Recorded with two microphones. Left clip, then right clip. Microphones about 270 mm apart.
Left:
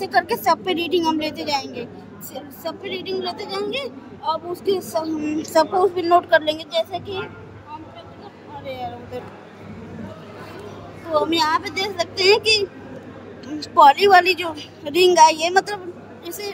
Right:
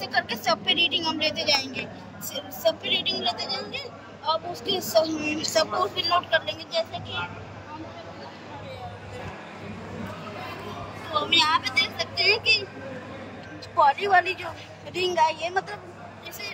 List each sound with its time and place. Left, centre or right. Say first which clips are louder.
0.0 s a woman's voice: left 7 dB; left
11.1 s a woman's voice: left 3 dB; centre
13.6 s a woman's voice: left 9 dB; left